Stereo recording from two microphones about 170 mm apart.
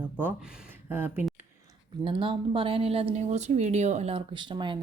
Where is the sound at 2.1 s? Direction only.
30° right (ahead or behind).